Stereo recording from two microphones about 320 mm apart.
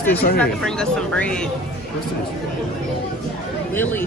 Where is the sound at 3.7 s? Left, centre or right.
Centre.